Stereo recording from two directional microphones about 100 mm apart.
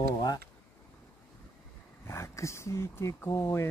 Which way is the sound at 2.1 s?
30° left (ahead or behind).